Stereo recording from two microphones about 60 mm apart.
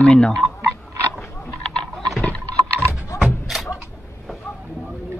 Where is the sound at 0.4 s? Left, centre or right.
Centre.